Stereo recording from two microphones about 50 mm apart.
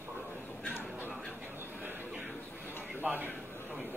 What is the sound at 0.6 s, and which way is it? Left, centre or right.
Crow, left.